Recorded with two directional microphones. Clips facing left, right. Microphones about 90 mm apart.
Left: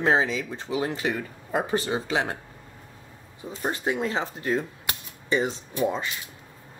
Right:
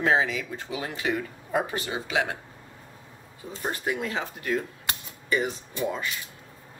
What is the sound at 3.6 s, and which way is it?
Speech, 25° left (ahead or behind).